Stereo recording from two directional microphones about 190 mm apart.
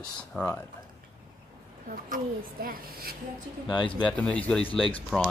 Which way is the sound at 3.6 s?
25° left (ahead or behind).